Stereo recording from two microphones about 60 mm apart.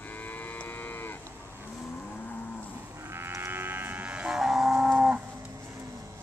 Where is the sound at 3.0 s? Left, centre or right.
Right.